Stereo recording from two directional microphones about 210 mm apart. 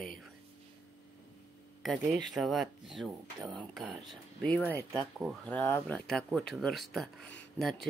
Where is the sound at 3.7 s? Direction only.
Centre (ahead or behind).